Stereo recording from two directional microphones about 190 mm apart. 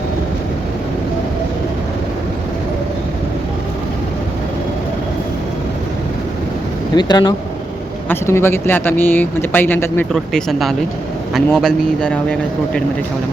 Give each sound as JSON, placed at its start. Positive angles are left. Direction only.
{"t": 6.9, "sound": "speech", "side_deg": 20}